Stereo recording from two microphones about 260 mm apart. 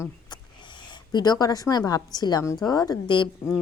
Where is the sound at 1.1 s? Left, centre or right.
Centre.